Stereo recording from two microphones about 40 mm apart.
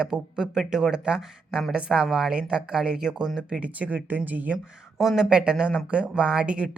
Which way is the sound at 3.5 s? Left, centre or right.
Right.